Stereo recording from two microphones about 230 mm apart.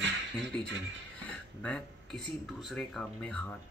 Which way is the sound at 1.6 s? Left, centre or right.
Centre.